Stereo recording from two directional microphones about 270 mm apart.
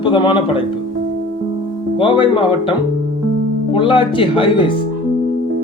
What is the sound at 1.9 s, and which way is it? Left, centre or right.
Speech, centre.